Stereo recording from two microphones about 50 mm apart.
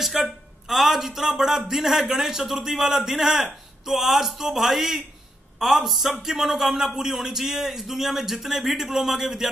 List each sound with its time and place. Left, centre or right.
0.0 s a man's voice: centre